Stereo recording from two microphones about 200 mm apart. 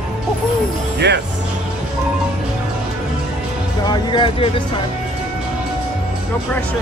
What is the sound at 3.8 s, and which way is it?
Speech, 20° left (ahead or behind).